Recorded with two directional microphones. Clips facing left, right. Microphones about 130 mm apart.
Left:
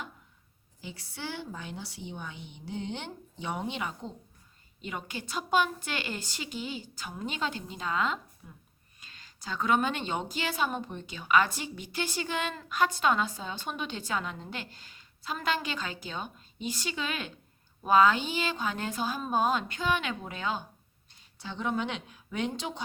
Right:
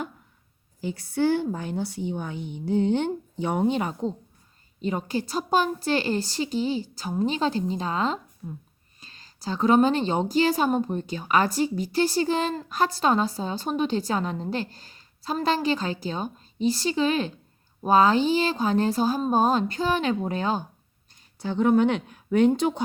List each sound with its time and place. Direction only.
0.8 s a woman's voice: 45° right (ahead or behind)